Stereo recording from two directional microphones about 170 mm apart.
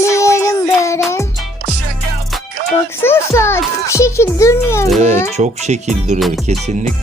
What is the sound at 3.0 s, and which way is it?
A child's voice, 15° left (ahead or behind).